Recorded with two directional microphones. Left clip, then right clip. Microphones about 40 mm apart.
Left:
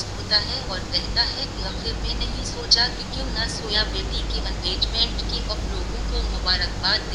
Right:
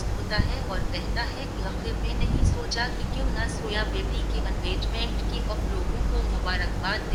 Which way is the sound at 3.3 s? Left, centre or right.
Left.